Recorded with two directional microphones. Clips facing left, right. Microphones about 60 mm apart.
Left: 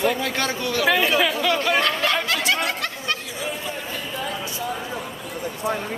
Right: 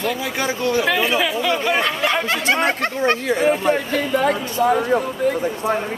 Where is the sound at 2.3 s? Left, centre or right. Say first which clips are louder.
Right 4 dB; right.